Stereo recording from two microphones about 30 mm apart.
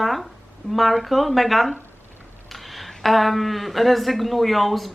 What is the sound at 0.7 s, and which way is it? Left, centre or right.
Speech, centre.